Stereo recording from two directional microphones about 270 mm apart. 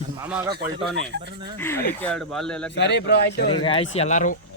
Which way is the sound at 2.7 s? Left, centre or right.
Left.